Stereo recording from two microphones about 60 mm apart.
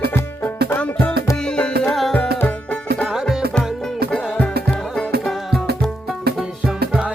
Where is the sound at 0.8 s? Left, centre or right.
Left.